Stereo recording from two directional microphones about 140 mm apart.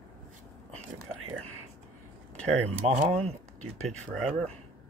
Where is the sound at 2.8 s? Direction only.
45° right (ahead or behind).